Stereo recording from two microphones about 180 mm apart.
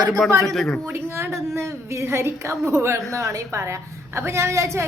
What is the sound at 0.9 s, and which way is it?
A woman's voice, 15° right (ahead or behind).